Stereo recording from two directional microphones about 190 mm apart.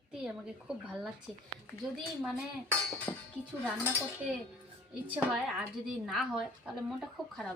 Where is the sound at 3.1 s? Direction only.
15° left (ahead or behind).